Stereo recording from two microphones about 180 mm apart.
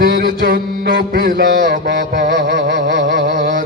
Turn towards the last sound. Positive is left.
turn(degrees=-50)  # may be behind; listen again after turning